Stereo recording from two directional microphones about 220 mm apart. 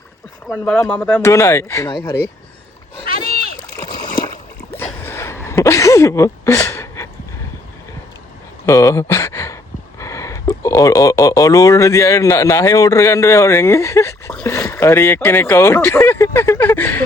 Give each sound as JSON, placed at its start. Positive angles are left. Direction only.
{"t": 0.5, "sound": "speech", "side_deg": 10}
{"t": 3.1, "sound": "rowboat", "side_deg": 40}
{"t": 3.8, "sound": "splash", "side_deg": 20}
{"t": 4.7, "sound": "a sound", "side_deg": 10}
{"t": 8.6, "sound": "speech", "side_deg": 15}